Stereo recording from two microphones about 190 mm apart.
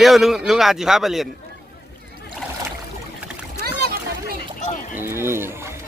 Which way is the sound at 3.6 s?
55° right (ahead or behind).